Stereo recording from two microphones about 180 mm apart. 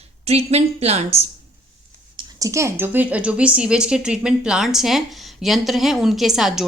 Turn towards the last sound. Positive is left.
turn(degrees=0)  # may be behind; listen again after turning